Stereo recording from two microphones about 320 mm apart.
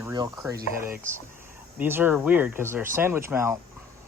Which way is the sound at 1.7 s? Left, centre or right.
Centre.